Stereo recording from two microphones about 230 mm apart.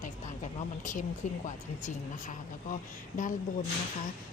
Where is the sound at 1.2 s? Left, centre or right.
Left.